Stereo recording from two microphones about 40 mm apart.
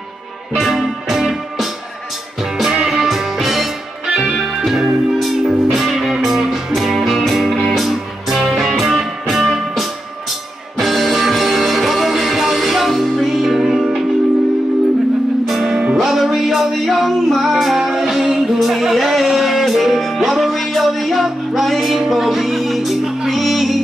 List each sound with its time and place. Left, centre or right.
0.6 s music: centre
2.7 s music: centre
13.7 s music: centre
15.4 s music: centre
15.8 s music: centre
16.1 s music: centre